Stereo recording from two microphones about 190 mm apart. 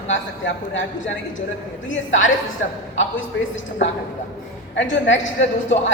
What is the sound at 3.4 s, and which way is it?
Speech, 75° left (ahead or behind).